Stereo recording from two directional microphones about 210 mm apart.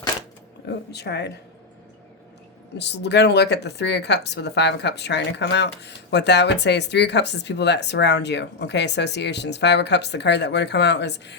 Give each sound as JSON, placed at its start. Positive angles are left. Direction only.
{"t": 0.7, "sound": "speech", "side_deg": 50}
{"t": 2.7, "sound": "speech", "side_deg": 55}